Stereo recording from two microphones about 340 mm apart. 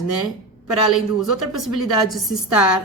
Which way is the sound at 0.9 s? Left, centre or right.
Centre.